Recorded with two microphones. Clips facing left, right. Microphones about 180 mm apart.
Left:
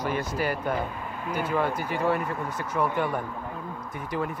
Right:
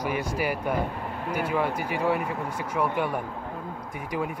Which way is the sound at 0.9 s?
60° right (ahead or behind).